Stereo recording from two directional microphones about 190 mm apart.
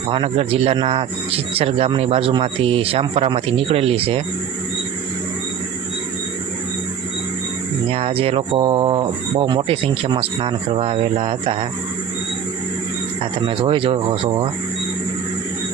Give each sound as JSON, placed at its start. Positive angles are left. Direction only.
{"t": 0.1, "sound": "a man's voice", "side_deg": -30}
{"t": 7.9, "sound": "a man's voice", "side_deg": -30}
{"t": 13.5, "sound": "a man's voice", "side_deg": -25}